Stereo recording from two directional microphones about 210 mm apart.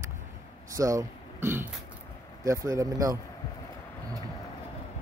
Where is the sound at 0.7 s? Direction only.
15° right (ahead or behind).